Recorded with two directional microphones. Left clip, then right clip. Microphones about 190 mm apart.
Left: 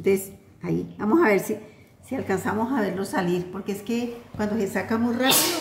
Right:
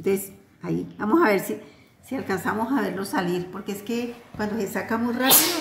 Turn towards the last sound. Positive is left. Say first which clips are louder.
# left 1 dB
turn(degrees=5)  # may be behind; listen again after turning